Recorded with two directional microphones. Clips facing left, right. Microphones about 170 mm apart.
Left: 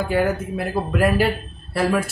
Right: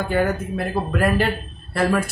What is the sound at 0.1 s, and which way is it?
Speech, 5° left (ahead or behind).